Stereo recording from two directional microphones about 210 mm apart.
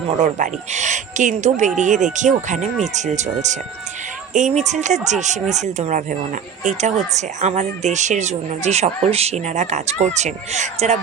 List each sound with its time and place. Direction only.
0.1 s speech: 35° right (ahead or behind)